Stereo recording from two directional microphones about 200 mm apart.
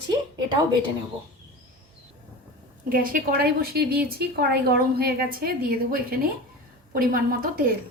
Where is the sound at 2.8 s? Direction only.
45° right (ahead or behind).